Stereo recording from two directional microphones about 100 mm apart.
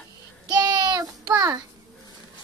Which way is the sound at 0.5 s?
40° right (ahead or behind).